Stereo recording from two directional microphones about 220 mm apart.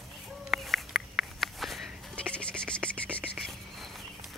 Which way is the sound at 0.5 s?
Centre (ahead or behind).